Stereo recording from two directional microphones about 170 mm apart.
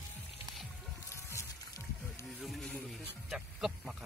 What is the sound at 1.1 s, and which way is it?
Music, 15° left (ahead or behind).